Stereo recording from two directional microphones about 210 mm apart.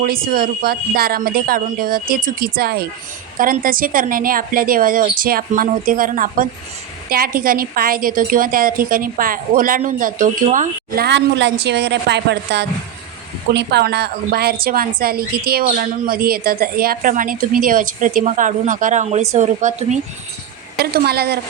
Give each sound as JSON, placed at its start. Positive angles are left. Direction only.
{"t": 0.0, "sound": "a woman's voice", "side_deg": -45}
{"t": 20.7, "sound": "a woman's voice", "side_deg": -50}